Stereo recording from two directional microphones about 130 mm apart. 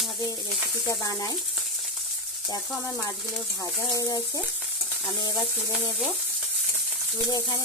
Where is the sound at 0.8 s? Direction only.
25° left (ahead or behind).